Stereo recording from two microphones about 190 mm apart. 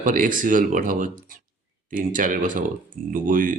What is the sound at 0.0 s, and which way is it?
Speech, 45° right (ahead or behind).